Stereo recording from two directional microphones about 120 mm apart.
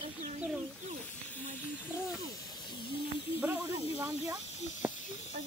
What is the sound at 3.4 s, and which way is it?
Speech, 15° right (ahead or behind).